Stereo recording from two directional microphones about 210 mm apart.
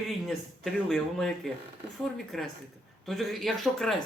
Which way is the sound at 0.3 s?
Centre (ahead or behind).